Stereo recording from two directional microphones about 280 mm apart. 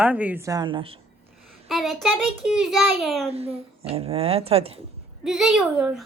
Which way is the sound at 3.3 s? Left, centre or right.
Right.